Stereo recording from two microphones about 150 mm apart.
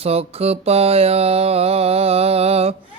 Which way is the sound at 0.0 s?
40° right (ahead or behind).